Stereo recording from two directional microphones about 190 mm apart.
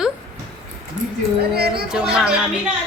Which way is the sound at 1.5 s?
55° right (ahead or behind).